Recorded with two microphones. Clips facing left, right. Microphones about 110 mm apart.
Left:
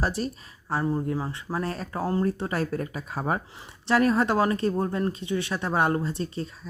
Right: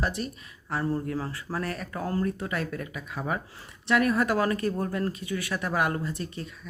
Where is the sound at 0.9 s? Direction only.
20° left (ahead or behind).